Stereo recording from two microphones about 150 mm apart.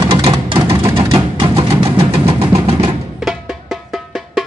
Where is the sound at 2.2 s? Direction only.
40° right (ahead or behind).